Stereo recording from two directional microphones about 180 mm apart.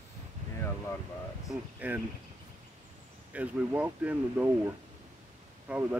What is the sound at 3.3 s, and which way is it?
Speech, 10° right (ahead or behind).